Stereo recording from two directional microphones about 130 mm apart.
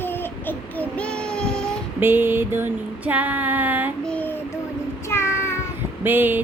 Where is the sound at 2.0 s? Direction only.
15° right (ahead or behind).